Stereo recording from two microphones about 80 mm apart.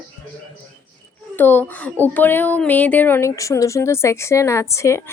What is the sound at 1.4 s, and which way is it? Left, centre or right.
Speech, left.